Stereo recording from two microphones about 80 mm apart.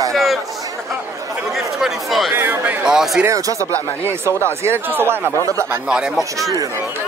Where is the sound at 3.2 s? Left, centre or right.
Right.